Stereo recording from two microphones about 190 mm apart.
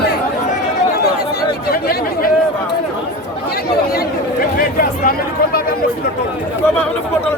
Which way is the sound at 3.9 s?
50° left (ahead or behind).